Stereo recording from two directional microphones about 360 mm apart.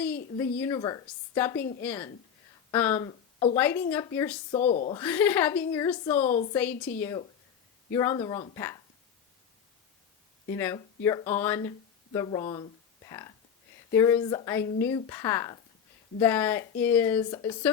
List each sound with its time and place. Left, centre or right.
0.6 s a woman's voice: centre
4.5 s a woman's voice: centre
6.3 s a woman's voice: centre
7.0 s a woman's voice: centre
10.5 s a woman's voice: centre
13.1 s a sound: centre
13.9 s a woman's voice: centre